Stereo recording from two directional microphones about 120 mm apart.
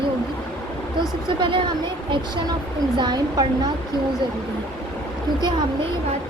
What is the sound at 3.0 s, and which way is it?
Speech, 35° right (ahead or behind).